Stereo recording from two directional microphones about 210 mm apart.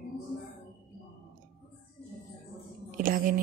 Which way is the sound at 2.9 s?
40° right (ahead or behind).